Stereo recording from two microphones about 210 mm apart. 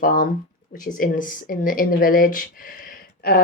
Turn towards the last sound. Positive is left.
turn(degrees=45)  # may be behind; listen again after turning